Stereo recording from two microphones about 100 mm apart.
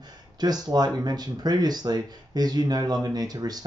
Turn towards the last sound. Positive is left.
turn(degrees=-40)  # may be behind; listen again after turning